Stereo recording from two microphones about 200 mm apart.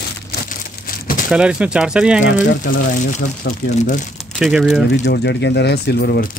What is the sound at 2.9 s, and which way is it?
Speech, 40° left (ahead or behind).